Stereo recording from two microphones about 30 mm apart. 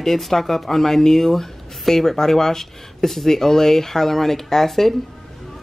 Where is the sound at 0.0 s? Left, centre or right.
Centre.